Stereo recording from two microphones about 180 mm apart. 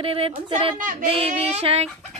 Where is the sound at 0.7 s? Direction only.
45° right (ahead or behind).